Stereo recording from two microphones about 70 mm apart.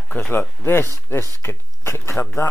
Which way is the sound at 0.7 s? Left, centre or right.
Left.